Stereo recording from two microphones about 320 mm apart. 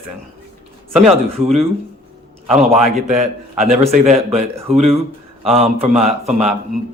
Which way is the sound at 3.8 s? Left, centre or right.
Right.